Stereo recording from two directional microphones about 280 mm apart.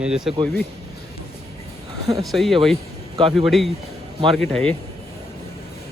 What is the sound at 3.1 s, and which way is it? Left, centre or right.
Speech, centre.